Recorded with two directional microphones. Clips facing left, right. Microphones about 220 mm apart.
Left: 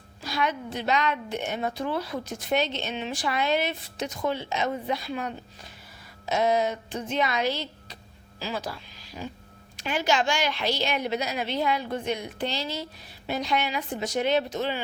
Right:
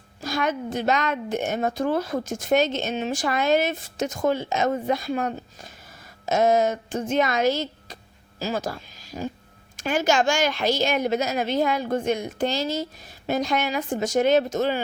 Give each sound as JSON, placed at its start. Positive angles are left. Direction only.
{"t": 0.2, "sound": "a woman's voice", "side_deg": -45}